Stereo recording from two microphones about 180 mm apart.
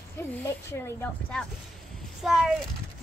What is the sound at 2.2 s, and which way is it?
Speech, centre (ahead or behind).